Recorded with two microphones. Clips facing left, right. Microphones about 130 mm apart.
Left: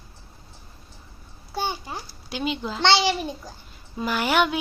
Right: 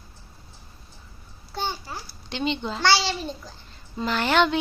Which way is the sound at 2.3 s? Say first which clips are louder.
Right 1 dB; 5° left (ahead or behind).